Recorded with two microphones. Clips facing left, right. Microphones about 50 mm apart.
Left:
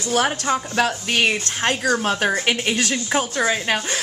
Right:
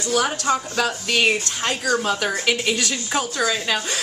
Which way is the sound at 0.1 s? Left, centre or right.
Left.